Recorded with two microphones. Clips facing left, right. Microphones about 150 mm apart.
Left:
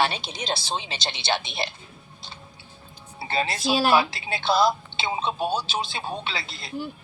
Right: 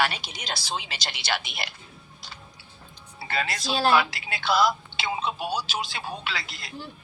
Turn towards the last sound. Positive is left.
turn(degrees=25)  # may be behind; listen again after turning